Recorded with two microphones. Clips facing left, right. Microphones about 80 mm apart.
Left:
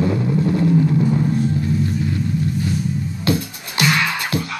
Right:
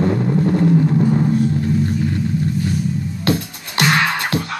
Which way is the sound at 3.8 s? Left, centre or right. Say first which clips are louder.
Right 2 dB; right.